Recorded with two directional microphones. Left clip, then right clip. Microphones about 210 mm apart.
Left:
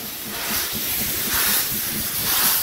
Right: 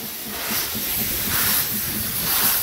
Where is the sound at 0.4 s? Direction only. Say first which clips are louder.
Left 1 dB; 15° left (ahead or behind).